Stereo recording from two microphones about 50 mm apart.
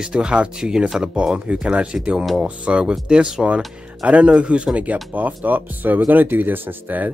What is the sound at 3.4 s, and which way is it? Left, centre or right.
Speech, right.